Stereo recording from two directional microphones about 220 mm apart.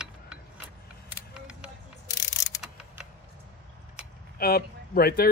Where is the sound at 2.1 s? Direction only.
15° left (ahead or behind).